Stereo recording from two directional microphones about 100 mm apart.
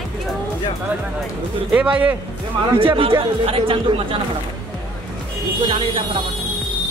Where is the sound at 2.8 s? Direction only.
65° right (ahead or behind).